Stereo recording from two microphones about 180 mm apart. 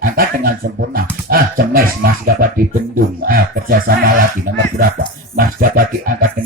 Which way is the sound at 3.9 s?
55° right (ahead or behind).